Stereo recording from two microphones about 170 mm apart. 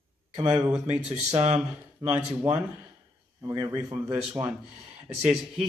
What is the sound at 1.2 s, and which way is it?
Speech, 40° right (ahead or behind).